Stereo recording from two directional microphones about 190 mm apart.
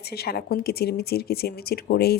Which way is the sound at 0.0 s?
55° left (ahead or behind).